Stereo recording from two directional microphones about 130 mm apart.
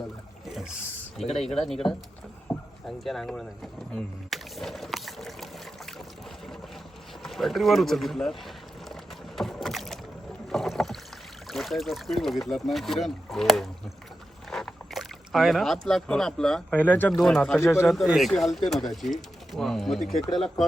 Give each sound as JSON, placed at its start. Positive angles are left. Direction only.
{"t": 1.4, "sound": "speech", "side_deg": 0}
{"t": 2.5, "sound": "a sound", "side_deg": 20}
{"t": 2.8, "sound": "speech", "side_deg": 0}
{"t": 7.2, "sound": "speech", "side_deg": 0}
{"t": 9.3, "sound": "rowboat", "side_deg": 0}
{"t": 11.4, "sound": "speech", "side_deg": 0}
{"t": 17.6, "sound": "a man's voice", "side_deg": 20}
{"t": 17.8, "sound": "speech", "side_deg": 0}